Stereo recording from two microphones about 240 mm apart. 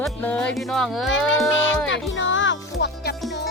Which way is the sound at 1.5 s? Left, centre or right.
Left.